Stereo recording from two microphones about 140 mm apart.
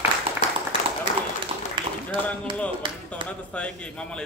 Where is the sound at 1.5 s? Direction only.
50° right (ahead or behind).